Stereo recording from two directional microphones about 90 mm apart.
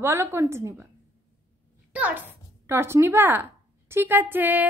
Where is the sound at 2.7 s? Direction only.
30° right (ahead or behind).